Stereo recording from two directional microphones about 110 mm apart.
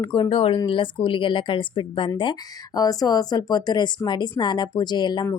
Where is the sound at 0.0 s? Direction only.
45° left (ahead or behind).